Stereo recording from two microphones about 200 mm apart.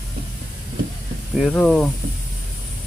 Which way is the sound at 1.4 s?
Centre (ahead or behind).